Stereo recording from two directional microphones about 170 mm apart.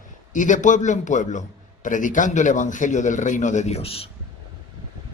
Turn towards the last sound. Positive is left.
turn(degrees=35)  # may be behind; listen again after turning